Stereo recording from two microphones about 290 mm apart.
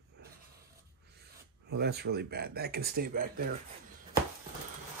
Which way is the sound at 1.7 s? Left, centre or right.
Right.